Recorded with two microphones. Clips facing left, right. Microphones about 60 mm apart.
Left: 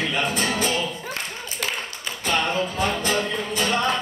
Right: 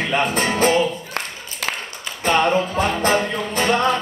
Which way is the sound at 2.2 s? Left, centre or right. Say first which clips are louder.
Right 6 dB; right.